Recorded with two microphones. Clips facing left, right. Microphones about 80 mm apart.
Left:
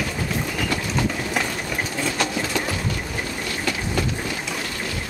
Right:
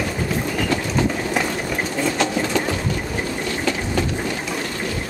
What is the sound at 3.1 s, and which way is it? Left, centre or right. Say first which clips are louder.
Vehicle: right 4 dB; centre.